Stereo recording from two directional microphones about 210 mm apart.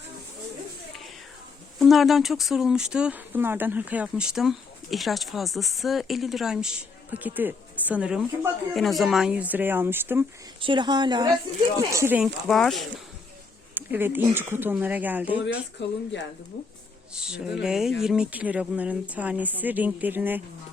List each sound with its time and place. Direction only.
1.8 s speech: centre (ahead or behind)
10.6 s a woman's voice: 20° right (ahead or behind); by 15.6 s 5° right (ahead or behind)
17.2 s speech: 5° right (ahead or behind)